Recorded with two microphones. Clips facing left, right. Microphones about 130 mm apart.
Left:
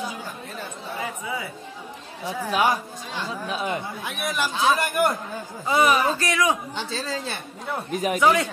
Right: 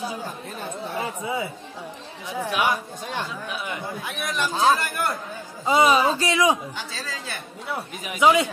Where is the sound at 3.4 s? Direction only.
35° left (ahead or behind).